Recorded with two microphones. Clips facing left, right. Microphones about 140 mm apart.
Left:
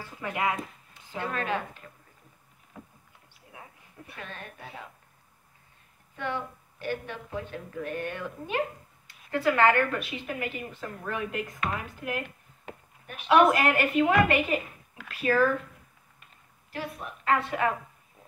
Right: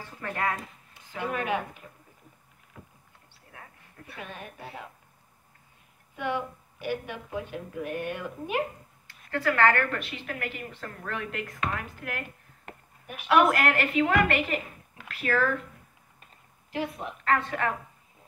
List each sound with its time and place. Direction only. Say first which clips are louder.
0.0 s speech: left 1 dB; 10° left (ahead or behind)
1.1 s a woman's voice: right 1 dB; 15° right (ahead or behind)
3.5 s a sound: left 1 dB; 15° left (ahead or behind)
4.2 s a woman's voice: right 2 dB; 10° right (ahead or behind)
6.1 s a woman's voice: right 2 dB; 10° right (ahead or behind)
9.0 s a woman's voice: left 2 dB; 20° left (ahead or behind)
12.6 s a sound: even; 10° right (ahead or behind)
13.3 s speech: left 1 dB; 20° left (ahead or behind)
16.7 s a woman's voice: right 4 dB; 20° right (ahead or behind)
17.2 s speech: left 1 dB; 10° left (ahead or behind)